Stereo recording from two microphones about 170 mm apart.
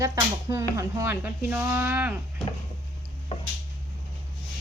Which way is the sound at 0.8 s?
15° right (ahead or behind).